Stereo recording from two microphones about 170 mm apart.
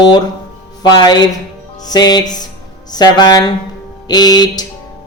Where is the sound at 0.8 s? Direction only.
25° left (ahead or behind).